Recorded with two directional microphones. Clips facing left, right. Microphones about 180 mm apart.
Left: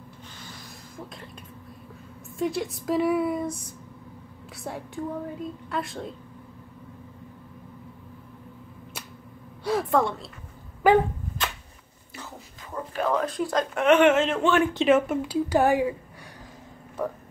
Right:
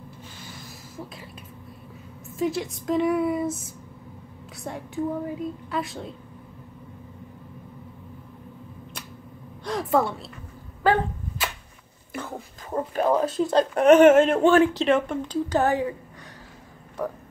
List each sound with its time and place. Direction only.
0.9 s a woman's voice: 5° right (ahead or behind)
2.3 s a woman's voice: centre (ahead or behind)
9.7 s a woman's voice: centre (ahead or behind)
10.8 s speech: 15° left (ahead or behind)
11.4 s a sound: 5° right (ahead or behind)
12.1 s a sound: 55° right (ahead or behind)
13.0 s speech: 25° right (ahead or behind); by 14.5 s 50° right (ahead or behind)
14.8 s speech: 5° left (ahead or behind)